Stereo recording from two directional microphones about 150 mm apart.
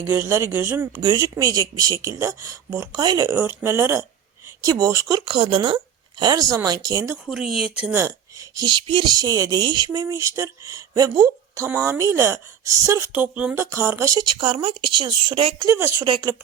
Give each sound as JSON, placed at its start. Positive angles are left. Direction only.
{"t": 0.1, "sound": "speech", "side_deg": -15}
{"t": 5.2, "sound": "speech", "side_deg": -35}
{"t": 7.3, "sound": "speech", "side_deg": -5}
{"t": 8.0, "sound": "speech", "side_deg": -25}
{"t": 13.1, "sound": "a woman's voice", "side_deg": -10}
{"t": 15.5, "sound": "speech", "side_deg": -20}
{"t": 16.0, "sound": "a woman's voice", "side_deg": -35}